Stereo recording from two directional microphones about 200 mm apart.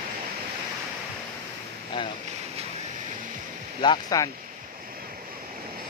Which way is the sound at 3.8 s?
20° left (ahead or behind).